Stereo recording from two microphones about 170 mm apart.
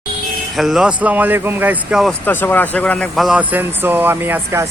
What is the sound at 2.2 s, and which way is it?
Speech, 10° left (ahead or behind).